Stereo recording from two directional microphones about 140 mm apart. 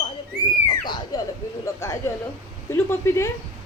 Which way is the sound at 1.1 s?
25° left (ahead or behind).